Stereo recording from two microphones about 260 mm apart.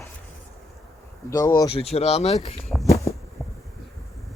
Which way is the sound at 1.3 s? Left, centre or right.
Centre.